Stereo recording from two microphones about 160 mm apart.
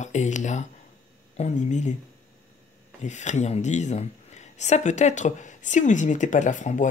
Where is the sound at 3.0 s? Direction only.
45° left (ahead or behind).